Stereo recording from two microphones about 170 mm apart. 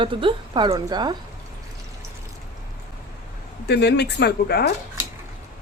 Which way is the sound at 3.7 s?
75° left (ahead or behind).